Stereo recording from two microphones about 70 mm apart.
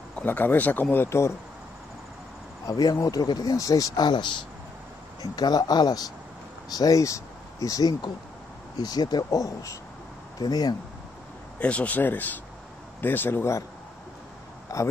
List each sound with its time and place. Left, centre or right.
0.2 s speech: left
0.9 s speech: left
2.6 s speech: left
5.2 s speech: left
6.7 s speech: left
8.7 s speech: left
9.3 s speech: left
10.4 s speech: left
11.6 s speech: centre; by 13.6 s left
14.7 s speech: left